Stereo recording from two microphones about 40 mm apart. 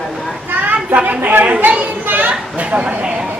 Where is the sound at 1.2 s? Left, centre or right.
Right.